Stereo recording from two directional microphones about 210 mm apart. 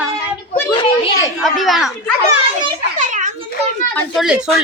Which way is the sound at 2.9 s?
35° right (ahead or behind).